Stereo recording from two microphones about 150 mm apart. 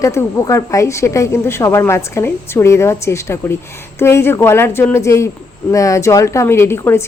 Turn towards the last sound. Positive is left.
turn(degrees=15)  # may be behind; listen again after turning